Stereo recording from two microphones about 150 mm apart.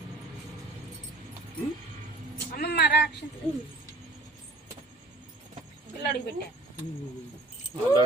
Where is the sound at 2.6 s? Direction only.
90° left.